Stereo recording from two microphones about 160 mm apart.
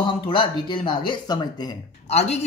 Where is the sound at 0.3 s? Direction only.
30° left (ahead or behind).